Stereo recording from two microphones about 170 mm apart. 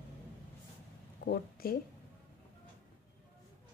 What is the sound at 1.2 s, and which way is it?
Speech, 60° left (ahead or behind).